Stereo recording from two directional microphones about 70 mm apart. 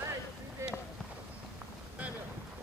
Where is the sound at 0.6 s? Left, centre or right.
Right.